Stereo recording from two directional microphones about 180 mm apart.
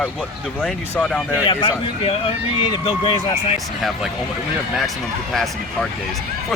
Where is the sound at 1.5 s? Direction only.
30° left (ahead or behind).